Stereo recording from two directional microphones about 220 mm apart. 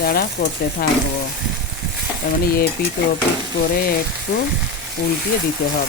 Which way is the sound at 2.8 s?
40° left (ahead or behind).